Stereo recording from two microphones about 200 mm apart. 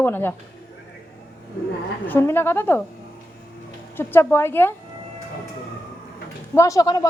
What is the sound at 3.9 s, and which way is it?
Speech, 10° left (ahead or behind).